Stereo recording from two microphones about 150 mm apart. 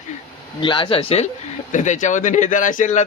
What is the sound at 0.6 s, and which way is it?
Speech, 35° left (ahead or behind).